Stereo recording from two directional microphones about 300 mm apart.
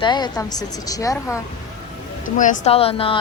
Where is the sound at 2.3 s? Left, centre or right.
Left.